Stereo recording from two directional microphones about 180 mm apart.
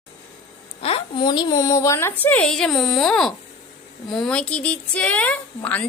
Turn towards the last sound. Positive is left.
turn(degrees=10)  # may be behind; listen again after turning